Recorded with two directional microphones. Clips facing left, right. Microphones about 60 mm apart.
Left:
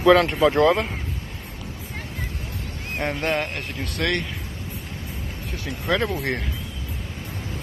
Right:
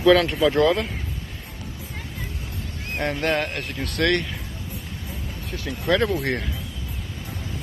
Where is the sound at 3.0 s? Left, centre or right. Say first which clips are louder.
Right 1 dB; left.